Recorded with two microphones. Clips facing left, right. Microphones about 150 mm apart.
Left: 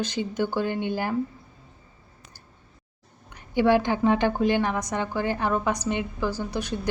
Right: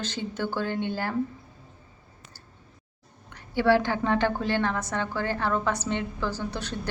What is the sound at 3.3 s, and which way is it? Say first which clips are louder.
A woman's voice: left 2 dB; 15° left (ahead or behind).